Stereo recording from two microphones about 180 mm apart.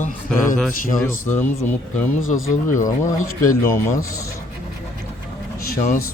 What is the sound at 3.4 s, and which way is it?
Speech, 45° left (ahead or behind).